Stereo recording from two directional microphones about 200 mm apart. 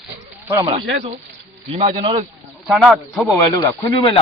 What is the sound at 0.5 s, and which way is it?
Speech, 25° right (ahead or behind).